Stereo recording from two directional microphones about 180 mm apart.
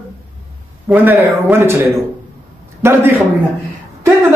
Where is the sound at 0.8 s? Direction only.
5° right (ahead or behind).